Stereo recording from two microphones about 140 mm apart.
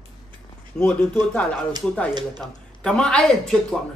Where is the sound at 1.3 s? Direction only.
5° left (ahead or behind).